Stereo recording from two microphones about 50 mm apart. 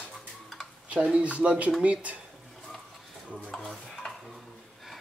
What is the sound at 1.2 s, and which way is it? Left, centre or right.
Speech, right.